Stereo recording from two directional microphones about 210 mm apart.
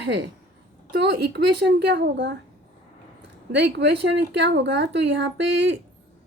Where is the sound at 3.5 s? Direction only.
55° right (ahead or behind).